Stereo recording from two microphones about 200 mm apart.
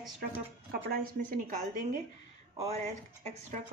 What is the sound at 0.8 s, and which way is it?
Speech, 50° right (ahead or behind).